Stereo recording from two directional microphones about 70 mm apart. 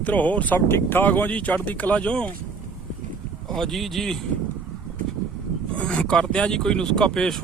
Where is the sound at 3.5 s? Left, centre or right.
Centre.